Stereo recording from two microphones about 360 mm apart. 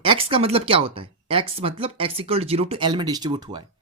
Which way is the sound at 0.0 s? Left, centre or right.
Centre.